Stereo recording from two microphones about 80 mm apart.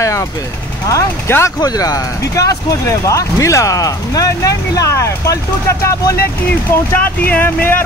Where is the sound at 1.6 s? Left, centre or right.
Left.